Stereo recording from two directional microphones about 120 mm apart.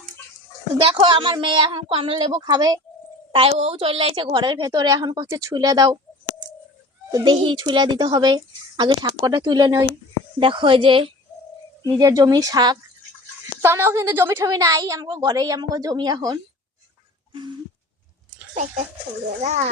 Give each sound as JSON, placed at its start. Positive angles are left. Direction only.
{"t": 0.8, "sound": "speech", "side_deg": -50}
{"t": 2.4, "sound": "speech", "side_deg": -35}
{"t": 3.3, "sound": "speech", "side_deg": -55}
{"t": 7.1, "sound": "speech", "side_deg": -40}
{"t": 10.4, "sound": "speech", "side_deg": -45}
{"t": 11.9, "sound": "speech", "side_deg": -30}
{"t": 13.6, "sound": "a woman's voice", "side_deg": -20}
{"t": 19.4, "sound": "a child's voice", "side_deg": -70}